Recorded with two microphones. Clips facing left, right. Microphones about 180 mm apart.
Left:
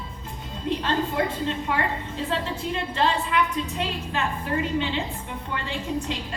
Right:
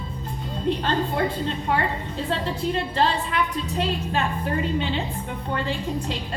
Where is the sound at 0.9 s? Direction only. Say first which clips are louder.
Right 1 dB; 35° right (ahead or behind).